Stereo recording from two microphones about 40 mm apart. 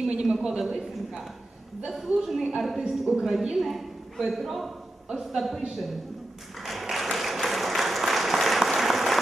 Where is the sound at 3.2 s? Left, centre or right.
Centre.